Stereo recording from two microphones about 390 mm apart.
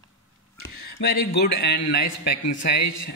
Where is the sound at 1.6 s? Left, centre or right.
Left.